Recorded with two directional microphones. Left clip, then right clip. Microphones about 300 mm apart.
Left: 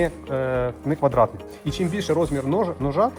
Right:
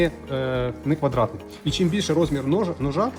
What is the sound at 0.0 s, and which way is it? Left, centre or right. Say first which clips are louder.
Speech: even; centre.